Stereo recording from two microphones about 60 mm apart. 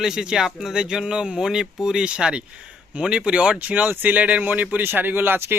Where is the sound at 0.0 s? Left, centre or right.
Centre.